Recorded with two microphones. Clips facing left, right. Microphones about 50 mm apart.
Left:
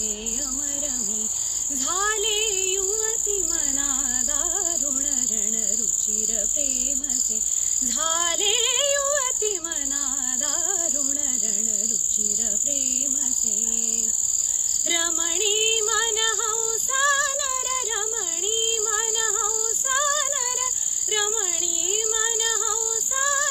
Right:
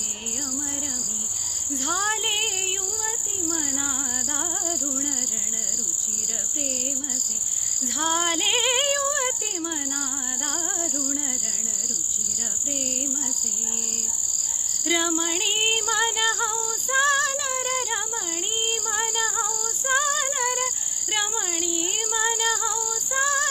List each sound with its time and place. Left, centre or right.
1.7 s child singing: right
7.9 s female singing: right
14.8 s female singing: right
20.4 s a sound: right
21.1 s child singing: right
21.8 s female singing: right